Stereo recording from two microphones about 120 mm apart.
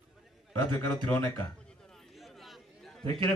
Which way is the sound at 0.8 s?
25° left (ahead or behind).